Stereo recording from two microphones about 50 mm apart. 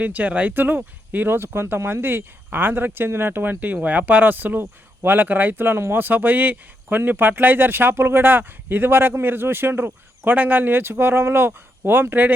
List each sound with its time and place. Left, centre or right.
0.0 s speech: right
1.3 s speech: right